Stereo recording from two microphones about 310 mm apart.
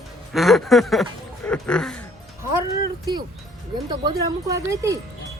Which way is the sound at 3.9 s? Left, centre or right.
Centre.